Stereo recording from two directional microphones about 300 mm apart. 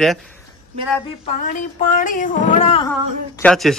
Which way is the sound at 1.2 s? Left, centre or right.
Left.